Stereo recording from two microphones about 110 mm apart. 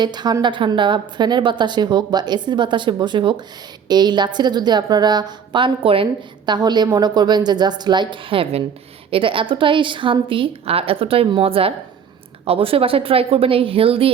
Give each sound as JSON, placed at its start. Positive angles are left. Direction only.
{"t": 0.0, "sound": "a woman's voice", "side_deg": -40}